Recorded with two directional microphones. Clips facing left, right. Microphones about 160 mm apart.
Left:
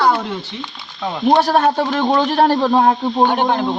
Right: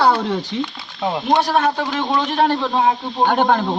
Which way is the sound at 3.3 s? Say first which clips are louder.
Right 1 dB; 45° right (ahead or behind).